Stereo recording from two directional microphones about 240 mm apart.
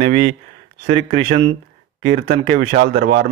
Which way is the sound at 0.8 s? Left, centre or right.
Right.